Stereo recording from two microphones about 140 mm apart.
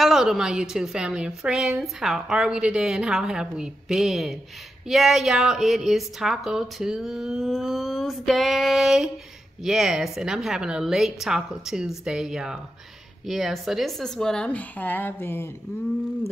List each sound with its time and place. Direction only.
0.0 s a woman's voice: 5° right (ahead or behind); by 15.5 s 15° left (ahead or behind)